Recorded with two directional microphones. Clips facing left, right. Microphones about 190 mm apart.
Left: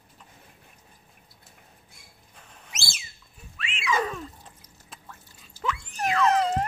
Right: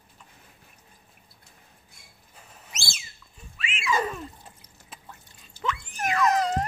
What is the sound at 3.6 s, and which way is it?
Wild animals, centre (ahead or behind).